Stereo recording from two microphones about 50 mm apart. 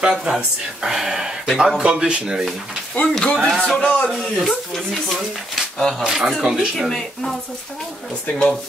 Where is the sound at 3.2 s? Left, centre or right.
Centre.